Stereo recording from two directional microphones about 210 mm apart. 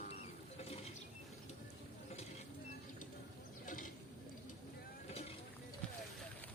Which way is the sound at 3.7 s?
40° left (ahead or behind).